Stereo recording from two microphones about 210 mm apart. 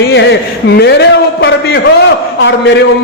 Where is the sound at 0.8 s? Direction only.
55° left (ahead or behind).